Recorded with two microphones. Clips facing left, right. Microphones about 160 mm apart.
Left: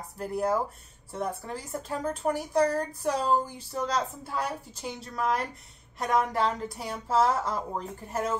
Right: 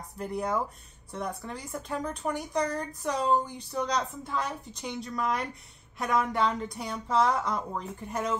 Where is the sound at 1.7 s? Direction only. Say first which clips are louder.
Left 2 dB; 35° left (ahead or behind).